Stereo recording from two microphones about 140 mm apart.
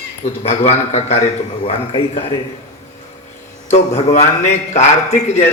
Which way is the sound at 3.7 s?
50° left (ahead or behind).